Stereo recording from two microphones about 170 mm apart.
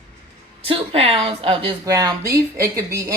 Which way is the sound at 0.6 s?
35° right (ahead or behind).